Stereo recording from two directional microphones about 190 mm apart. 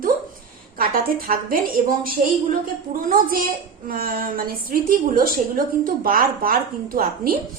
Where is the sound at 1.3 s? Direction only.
50° right (ahead or behind).